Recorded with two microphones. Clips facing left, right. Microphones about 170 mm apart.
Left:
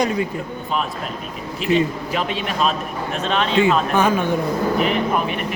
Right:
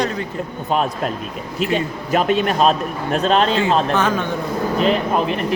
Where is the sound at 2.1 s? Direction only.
45° right (ahead or behind).